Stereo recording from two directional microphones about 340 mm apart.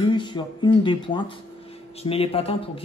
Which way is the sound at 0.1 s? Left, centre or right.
Centre.